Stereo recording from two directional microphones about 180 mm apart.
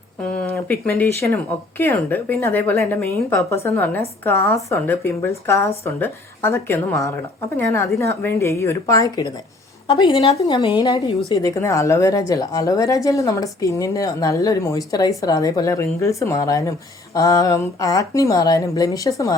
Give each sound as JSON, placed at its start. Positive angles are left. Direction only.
{"t": 0.2, "sound": "a woman's voice", "side_deg": 15}